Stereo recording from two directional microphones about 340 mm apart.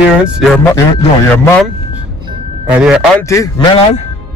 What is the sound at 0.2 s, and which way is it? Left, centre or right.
A man's voice, centre.